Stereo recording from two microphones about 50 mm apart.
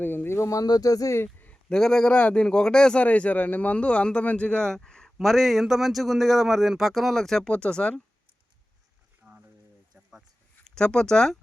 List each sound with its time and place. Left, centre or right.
0.0 s speech: left
0.3 s speech: left
1.7 s speech: centre
2.1 s a man's voice: left
2.5 s speech: centre
3.0 s a man's voice: left
4.6 s speech: centre
7.4 s a man's voice: centre
9.2 s a sound: centre
10.8 s speech: centre